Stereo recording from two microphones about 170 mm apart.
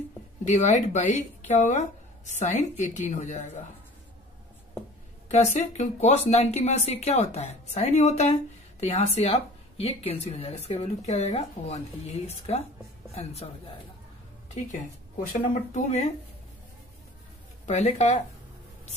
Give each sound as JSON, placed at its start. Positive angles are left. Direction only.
{"t": 0.5, "sound": "a woman's voice", "side_deg": 45}
{"t": 5.3, "sound": "speech", "side_deg": 40}
{"t": 14.5, "sound": "a woman's voice", "side_deg": 40}
{"t": 17.6, "sound": "a woman's voice", "side_deg": 45}